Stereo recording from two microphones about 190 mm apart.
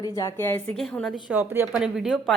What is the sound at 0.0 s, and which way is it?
A woman's voice, 20° left (ahead or behind).